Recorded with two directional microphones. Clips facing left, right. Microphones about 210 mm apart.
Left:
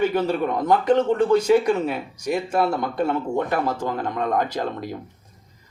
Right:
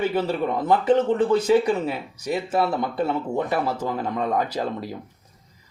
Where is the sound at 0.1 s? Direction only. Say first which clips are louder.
Left 1 dB; 5° right (ahead or behind).